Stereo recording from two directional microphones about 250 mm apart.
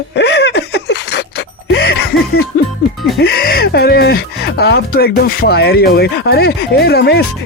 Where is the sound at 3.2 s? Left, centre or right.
Left.